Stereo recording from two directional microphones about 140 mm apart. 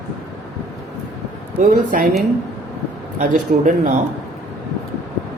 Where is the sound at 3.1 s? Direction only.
65° right (ahead or behind).